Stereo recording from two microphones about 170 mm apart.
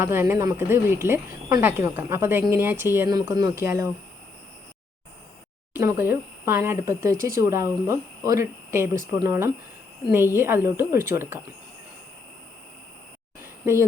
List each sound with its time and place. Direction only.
0.0 s speech: 15° right (ahead or behind)
5.7 s speech: 15° right (ahead or behind)
13.4 s a sound: 15° right (ahead or behind)